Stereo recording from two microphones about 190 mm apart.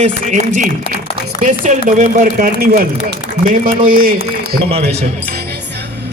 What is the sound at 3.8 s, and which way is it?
Speech, 50° right (ahead or behind).